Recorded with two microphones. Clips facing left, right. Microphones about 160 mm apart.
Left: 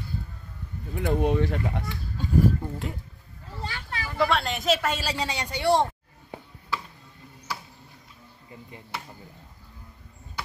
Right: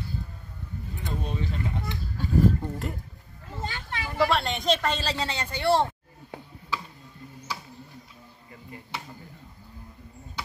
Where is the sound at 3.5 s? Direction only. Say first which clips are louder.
Right 1 dB; 20° right (ahead or behind).